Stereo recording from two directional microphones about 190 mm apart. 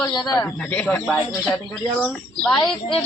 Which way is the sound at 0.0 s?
20° left (ahead or behind).